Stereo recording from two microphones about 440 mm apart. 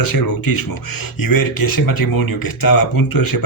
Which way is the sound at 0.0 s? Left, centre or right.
Left.